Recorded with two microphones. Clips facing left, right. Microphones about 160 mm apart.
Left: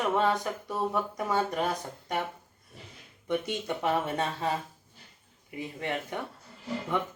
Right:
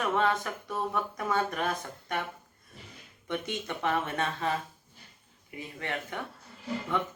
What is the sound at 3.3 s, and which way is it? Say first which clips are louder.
Speech: left 4 dB; 15° left (ahead or behind).